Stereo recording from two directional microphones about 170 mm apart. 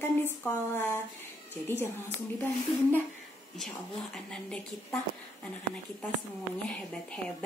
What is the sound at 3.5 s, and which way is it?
Speech, 5° left (ahead or behind).